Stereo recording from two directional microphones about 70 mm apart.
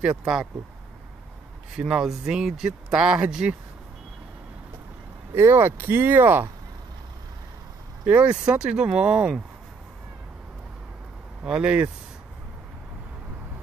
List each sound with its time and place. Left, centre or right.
0.2 s speech: centre
1.8 s speech: centre
5.3 s speech: right
8.0 s speech: right
11.4 s speech: centre